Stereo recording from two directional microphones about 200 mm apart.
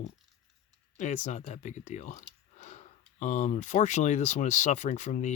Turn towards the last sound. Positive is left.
turn(degrees=35)  # may be behind; listen again after turning